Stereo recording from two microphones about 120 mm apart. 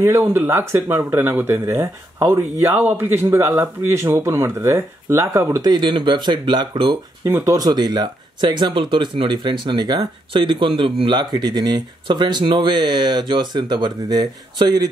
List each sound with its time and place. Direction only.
0.0 s speech: 20° right (ahead or behind)
5.6 s speech: 35° right (ahead or behind)
7.2 s speech: 20° right (ahead or behind)
7.5 s speech: 35° right (ahead or behind)